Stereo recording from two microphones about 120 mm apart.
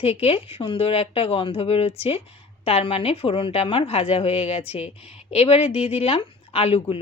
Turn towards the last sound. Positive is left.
turn(degrees=50)  # may be behind; listen again after turning